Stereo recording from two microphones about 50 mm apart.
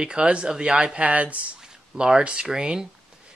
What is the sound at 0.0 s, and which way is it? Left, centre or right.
Speech, centre.